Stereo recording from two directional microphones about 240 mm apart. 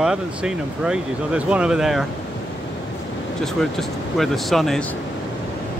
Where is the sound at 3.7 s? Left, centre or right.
Centre.